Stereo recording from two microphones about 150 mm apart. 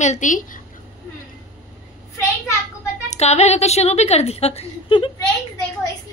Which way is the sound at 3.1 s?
45° left (ahead or behind).